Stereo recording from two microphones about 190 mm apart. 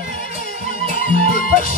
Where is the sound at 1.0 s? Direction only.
50° left (ahead or behind).